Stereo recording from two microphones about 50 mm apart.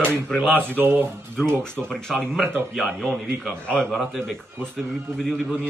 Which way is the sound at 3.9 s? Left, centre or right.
Centre.